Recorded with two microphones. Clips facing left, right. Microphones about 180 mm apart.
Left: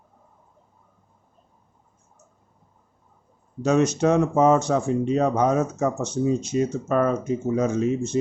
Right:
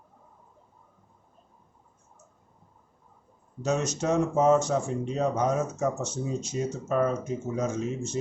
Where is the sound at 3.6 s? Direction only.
60° left (ahead or behind).